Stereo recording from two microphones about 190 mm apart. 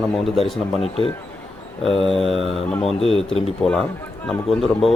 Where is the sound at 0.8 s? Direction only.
30° left (ahead or behind).